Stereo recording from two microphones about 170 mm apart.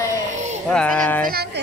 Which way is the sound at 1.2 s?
65° right (ahead or behind).